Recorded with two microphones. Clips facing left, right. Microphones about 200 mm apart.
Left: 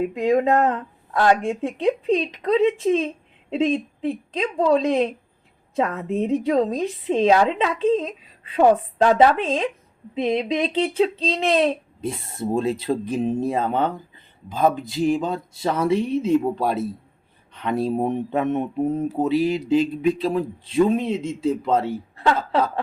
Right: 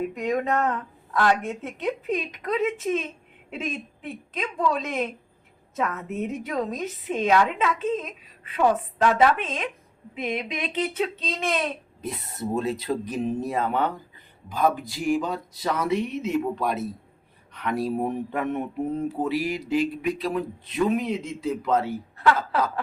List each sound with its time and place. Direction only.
0.1 s a woman's voice: 30° left (ahead or behind)